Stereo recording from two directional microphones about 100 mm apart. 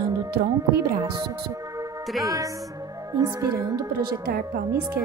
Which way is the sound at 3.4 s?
35° right (ahead or behind).